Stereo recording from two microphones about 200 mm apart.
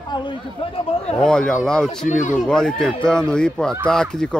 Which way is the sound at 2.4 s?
5° left (ahead or behind).